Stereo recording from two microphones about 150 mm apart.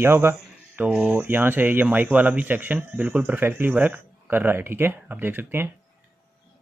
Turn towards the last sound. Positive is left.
turn(degrees=-15)  # may be behind; listen again after turning